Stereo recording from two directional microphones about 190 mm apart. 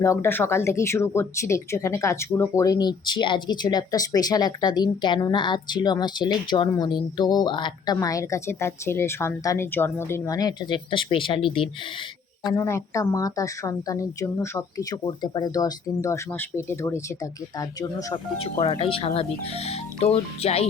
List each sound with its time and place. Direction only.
0.0 s a woman's voice: 15° left (ahead or behind)
12.5 s a woman's voice: 15° left (ahead or behind)
18.6 s speech: 30° left (ahead or behind)